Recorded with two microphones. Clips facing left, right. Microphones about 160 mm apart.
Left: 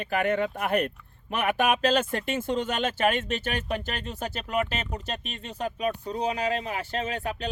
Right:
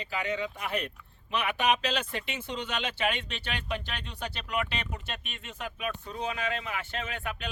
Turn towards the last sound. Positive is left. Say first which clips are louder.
# left 6 dB
turn(degrees=35)  # may be behind; listen again after turning